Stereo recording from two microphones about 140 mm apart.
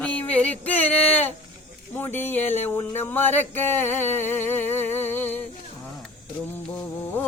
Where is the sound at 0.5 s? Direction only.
45° left (ahead or behind).